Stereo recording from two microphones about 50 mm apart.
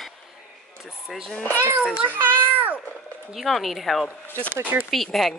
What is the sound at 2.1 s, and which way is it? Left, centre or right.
Speech, right.